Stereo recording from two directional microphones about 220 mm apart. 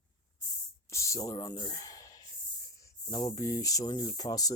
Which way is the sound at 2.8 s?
15° left (ahead or behind).